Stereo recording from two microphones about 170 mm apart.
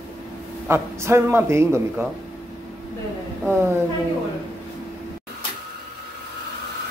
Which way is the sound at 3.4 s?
15° right (ahead or behind).